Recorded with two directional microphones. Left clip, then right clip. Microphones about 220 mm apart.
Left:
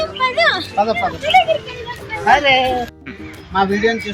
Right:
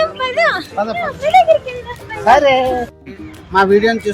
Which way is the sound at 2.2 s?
15° right (ahead or behind).